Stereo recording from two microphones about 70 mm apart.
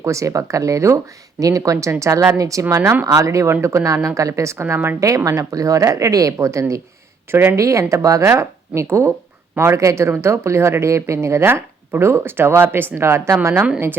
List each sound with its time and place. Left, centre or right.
0.0 s speech: right
5.0 s speech: right
7.3 s speech: right
7.5 s speech: right
13.4 s speech: right